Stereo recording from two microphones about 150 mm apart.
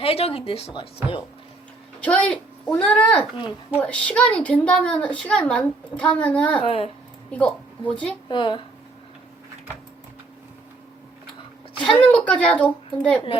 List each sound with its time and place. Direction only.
0.0 s speech: 40° left (ahead or behind)
1.0 s speech: 10° right (ahead or behind)
2.0 s a woman's voice: 10° left (ahead or behind)
6.6 s speech: 40° left (ahead or behind)
7.3 s a woman's voice: 10° left (ahead or behind)
8.3 s speech: 30° left (ahead or behind)
11.8 s a woman's voice: 10° left (ahead or behind)